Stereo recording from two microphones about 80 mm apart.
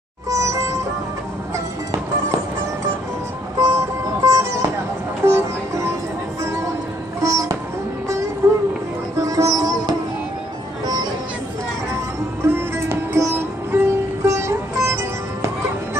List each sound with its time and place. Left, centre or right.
0.3 s music: right
3.5 s music: right
12.4 s music: right